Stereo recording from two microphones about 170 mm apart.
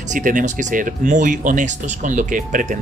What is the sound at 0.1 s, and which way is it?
Speech, 50° right (ahead or behind).